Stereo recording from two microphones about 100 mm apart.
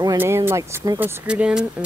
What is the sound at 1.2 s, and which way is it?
Speech, 10° right (ahead or behind).